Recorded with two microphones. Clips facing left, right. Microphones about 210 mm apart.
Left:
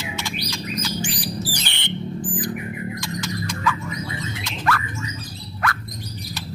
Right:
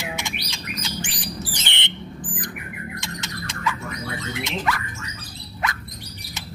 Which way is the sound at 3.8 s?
65° right (ahead or behind).